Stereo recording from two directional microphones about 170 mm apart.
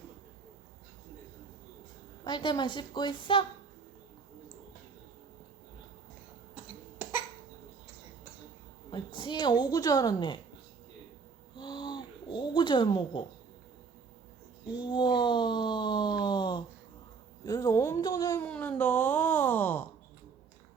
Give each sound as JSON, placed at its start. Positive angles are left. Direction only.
{"t": 2.2, "sound": "a woman's voice", "side_deg": 25}
{"t": 6.5, "sound": "cough", "side_deg": -10}
{"t": 8.9, "sound": "a woman's voice", "side_deg": 25}
{"t": 11.5, "sound": "a sound", "side_deg": 25}
{"t": 14.7, "sound": "a sound", "side_deg": 25}
{"t": 17.4, "sound": "a woman's voice", "side_deg": 20}
{"t": 18.4, "sound": "wail", "side_deg": 5}